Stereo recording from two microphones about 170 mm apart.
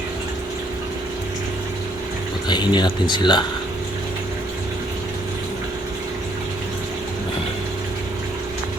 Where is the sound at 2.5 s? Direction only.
25° left (ahead or behind).